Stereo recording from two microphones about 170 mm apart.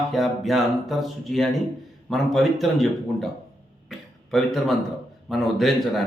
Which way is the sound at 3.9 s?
Centre (ahead or behind).